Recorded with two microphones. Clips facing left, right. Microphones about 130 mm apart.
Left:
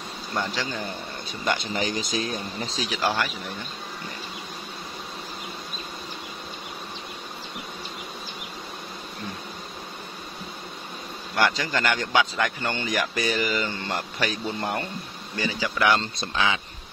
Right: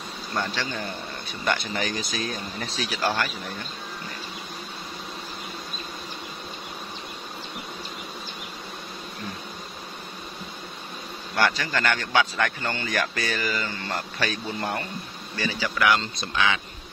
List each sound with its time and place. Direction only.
1.4 s speech: 20° left (ahead or behind)
2.8 s a man's voice: 15° left (ahead or behind)
11.3 s a man's voice: 15° left (ahead or behind)